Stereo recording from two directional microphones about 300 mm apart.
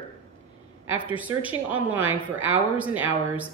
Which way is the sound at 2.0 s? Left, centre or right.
Right.